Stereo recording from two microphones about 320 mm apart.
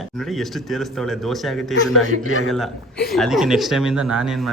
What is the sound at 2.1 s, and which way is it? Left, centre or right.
Speech, left.